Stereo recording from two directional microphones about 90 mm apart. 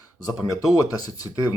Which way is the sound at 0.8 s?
40° left (ahead or behind).